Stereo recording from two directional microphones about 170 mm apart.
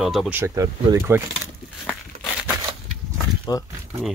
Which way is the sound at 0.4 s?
15° right (ahead or behind).